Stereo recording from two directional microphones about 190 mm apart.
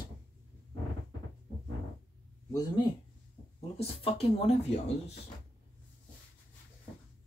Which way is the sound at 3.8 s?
30° left (ahead or behind).